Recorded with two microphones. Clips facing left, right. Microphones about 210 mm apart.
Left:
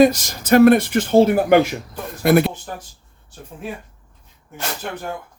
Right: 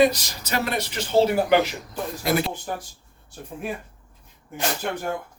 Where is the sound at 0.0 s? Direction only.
45° left (ahead or behind).